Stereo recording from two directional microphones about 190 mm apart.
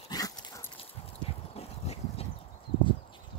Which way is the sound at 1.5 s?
30° left (ahead or behind).